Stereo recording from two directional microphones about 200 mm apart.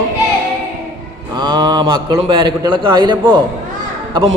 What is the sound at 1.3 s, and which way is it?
A man's voice, 20° right (ahead or behind).